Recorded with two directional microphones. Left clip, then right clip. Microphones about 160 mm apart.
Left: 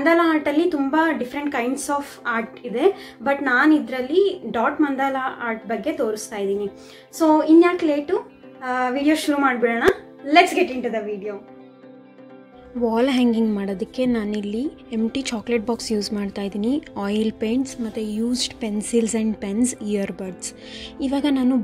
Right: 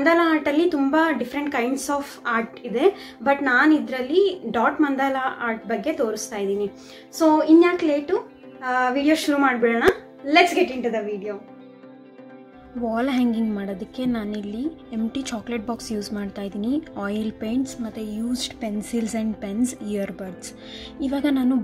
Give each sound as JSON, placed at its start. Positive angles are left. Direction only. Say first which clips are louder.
{"t": 0.0, "sound": "a woman's voice", "louder": "left 1 dB", "side_deg": 0}
{"t": 12.8, "sound": "a woman's voice", "louder": "left 4 dB", "side_deg": 40}